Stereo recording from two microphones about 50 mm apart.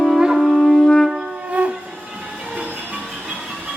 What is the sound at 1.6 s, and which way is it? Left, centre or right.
Train, right.